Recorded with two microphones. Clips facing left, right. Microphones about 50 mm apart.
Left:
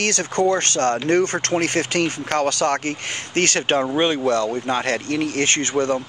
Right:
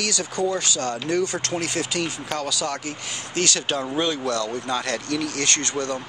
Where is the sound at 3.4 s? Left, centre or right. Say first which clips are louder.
Left 5 dB; left.